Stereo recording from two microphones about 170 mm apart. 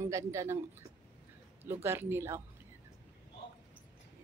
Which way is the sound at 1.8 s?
15° right (ahead or behind).